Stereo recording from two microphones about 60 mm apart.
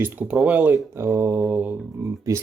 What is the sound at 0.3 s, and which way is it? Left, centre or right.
Speech, right.